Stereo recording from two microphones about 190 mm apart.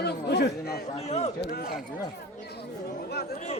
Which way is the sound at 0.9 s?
35° left (ahead or behind).